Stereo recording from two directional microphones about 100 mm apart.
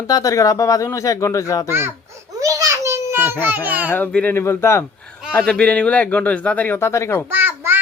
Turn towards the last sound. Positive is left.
turn(degrees=-20)  # may be behind; listen again after turning